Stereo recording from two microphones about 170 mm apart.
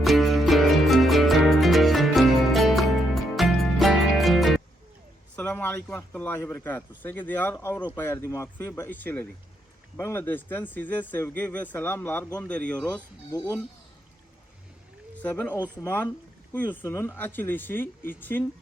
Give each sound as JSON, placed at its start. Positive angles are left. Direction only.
{"t": 0.0, "sound": "music", "side_deg": 0}
{"t": 5.4, "sound": "speech", "side_deg": 10}
{"t": 13.3, "sound": "speech", "side_deg": 20}
{"t": 15.1, "sound": "speech", "side_deg": 10}